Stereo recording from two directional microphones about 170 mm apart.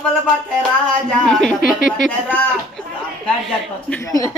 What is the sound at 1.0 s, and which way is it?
A woman's voice, 5° left (ahead or behind).